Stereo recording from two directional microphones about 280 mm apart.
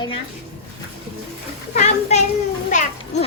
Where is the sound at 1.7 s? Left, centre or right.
Left.